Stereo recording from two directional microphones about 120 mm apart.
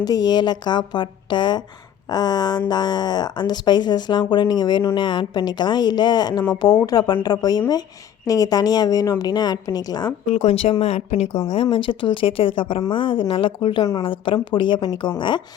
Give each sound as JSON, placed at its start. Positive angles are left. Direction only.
{"t": 0.0, "sound": "speech", "side_deg": 35}
{"t": 10.3, "sound": "speech", "side_deg": 65}
{"t": 11.4, "sound": "speech", "side_deg": 50}